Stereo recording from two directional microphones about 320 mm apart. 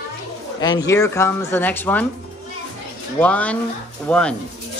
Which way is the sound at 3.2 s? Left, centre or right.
Centre.